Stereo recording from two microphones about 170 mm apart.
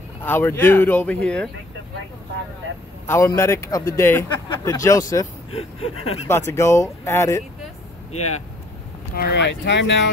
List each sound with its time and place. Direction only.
0.2 s speech: 10° left (ahead or behind)
3.1 s speech: 15° left (ahead or behind)
5.5 s speech: 35° left (ahead or behind)
6.2 s speech: 15° left (ahead or behind)
9.1 s speech: 80° left